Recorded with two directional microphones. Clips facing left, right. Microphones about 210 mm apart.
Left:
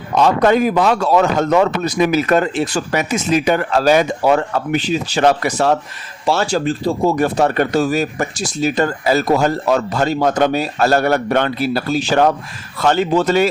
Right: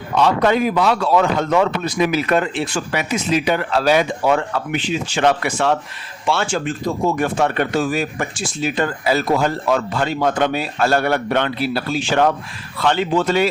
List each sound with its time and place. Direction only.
0.1 s speech: 45° left (ahead or behind)